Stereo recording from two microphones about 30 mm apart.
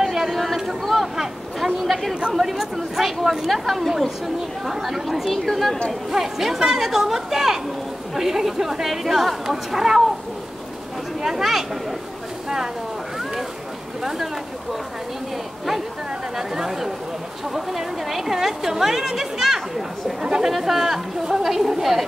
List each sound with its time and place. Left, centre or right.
0.0 s a sound: centre
0.3 s a sound: centre
1.0 s a sound: centre
2.3 s chatter: centre
3.6 s a woman's voice: centre
4.4 s a woman's voice: centre
6.1 s a woman's voice: centre
11.2 s a woman's voice: centre
14.0 s a woman's voice: centre
16.3 s a woman's voice: centre
20.5 s a woman's voice: centre